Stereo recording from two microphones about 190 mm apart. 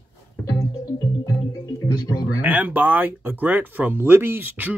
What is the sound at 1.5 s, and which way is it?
Music, 20° left (ahead or behind).